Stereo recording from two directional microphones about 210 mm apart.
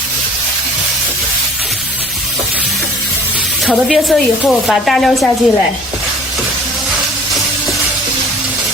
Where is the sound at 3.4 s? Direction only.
Centre (ahead or behind).